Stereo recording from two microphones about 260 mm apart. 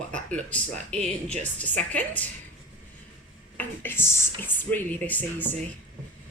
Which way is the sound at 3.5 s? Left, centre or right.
Centre.